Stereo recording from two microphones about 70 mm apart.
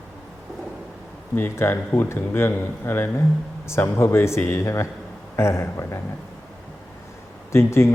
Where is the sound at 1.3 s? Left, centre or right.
Left.